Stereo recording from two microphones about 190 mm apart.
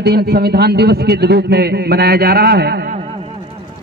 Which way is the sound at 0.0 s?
60° right (ahead or behind).